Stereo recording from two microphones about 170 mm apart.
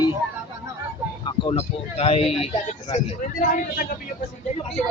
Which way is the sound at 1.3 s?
35° left (ahead or behind).